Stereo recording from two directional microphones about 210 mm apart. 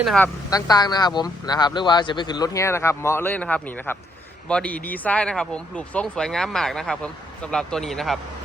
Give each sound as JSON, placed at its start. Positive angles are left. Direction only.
{"t": 0.0, "sound": "speech", "side_deg": 0}
{"t": 0.5, "sound": "a man's voice", "side_deg": 20}